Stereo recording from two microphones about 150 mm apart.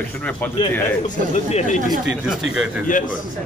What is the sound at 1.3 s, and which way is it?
Speech, 50° left (ahead or behind).